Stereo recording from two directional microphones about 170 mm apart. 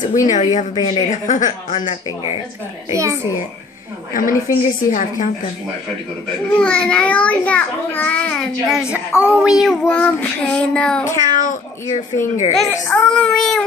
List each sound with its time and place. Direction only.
0.2 s speech: 45° left (ahead or behind)
0.7 s a woman's voice: 25° left (ahead or behind)
1.1 s speech: 50° left (ahead or behind)
1.8 s speech: 30° left (ahead or behind)
2.9 s a child's voice: 15° right (ahead or behind)
4.1 s speech: 55° left (ahead or behind)
6.6 s a child's voice: 5° left (ahead or behind)
8.9 s child singing: 10° right (ahead or behind)
11.3 s speech: 50° left (ahead or behind)
12.5 s child singing: 5° left (ahead or behind)